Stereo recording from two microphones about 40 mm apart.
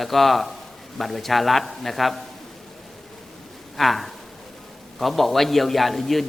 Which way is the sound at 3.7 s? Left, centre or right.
Centre.